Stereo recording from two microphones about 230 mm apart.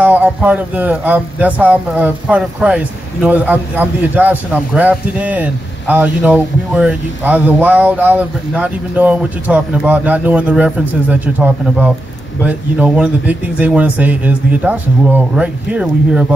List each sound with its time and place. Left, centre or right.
0.0 s speech: centre